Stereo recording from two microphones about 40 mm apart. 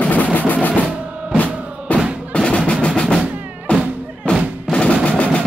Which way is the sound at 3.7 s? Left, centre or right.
Left.